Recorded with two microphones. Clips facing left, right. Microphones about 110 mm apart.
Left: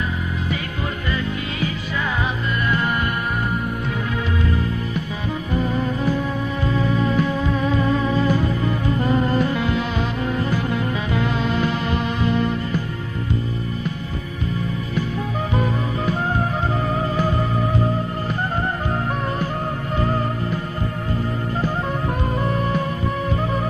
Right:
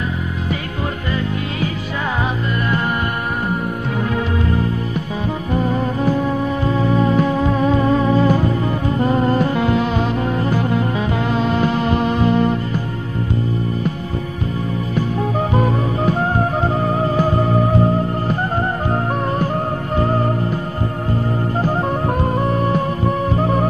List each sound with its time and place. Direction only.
5.5 s music: 45° right (ahead or behind)
15.5 s music: 45° right (ahead or behind)
18.9 s music: 40° right (ahead or behind)
21.5 s music: 40° right (ahead or behind)